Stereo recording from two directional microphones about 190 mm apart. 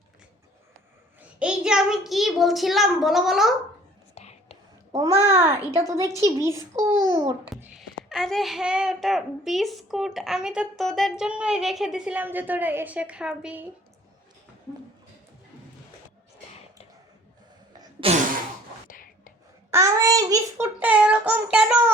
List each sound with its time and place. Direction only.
1.4 s speech: 5° right (ahead or behind)
4.1 s whispering: 35° left (ahead or behind)
4.9 s child singing: 15° right (ahead or behind)
7.6 s speech: centre (ahead or behind)
17.7 s cough: 30° right (ahead or behind)
18.9 s whispering: 45° left (ahead or behind)
19.7 s child singing: 15° right (ahead or behind)